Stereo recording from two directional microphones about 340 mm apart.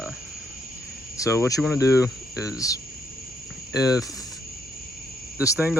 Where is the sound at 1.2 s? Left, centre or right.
Centre.